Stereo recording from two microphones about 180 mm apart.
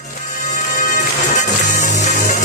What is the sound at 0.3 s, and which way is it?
Music, 40° left (ahead or behind).